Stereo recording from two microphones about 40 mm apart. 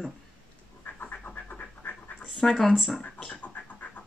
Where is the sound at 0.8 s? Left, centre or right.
Left.